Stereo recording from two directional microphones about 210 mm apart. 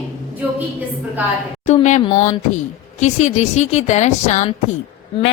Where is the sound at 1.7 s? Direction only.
35° left (ahead or behind).